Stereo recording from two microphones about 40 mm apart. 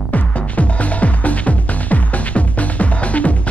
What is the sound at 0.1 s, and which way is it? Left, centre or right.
Music, left.